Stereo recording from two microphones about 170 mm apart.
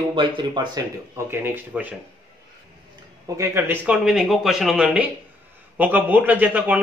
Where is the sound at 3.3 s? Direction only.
15° right (ahead or behind).